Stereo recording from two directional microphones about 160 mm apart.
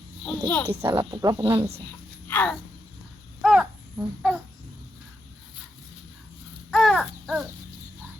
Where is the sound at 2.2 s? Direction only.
15° left (ahead or behind).